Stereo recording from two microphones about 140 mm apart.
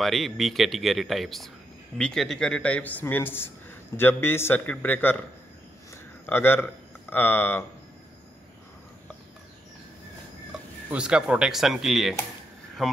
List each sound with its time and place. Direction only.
0.0 s a man's voice: centre (ahead or behind)
6.2 s speech: 15° left (ahead or behind)
10.9 s speech: 5° right (ahead or behind)